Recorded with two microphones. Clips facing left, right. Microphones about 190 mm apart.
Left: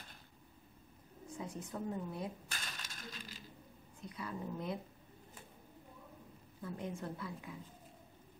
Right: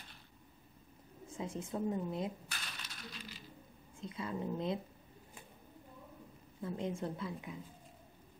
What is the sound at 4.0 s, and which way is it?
Speech, 25° right (ahead or behind).